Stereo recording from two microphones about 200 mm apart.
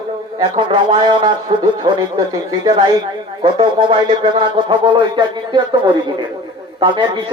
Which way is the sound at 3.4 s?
25° right (ahead or behind).